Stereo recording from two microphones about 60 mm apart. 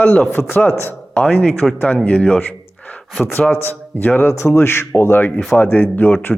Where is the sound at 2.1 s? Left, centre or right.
Centre.